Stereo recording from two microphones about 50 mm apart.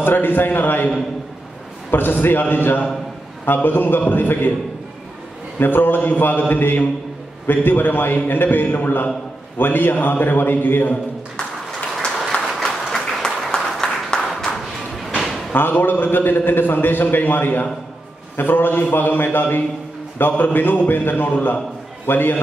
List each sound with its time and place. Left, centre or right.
0.0 s a man's voice: left
1.9 s a man's voice: left
5.6 s a man's voice: left
12.4 s applause: centre
15.0 s music: centre
15.5 s a man's voice: left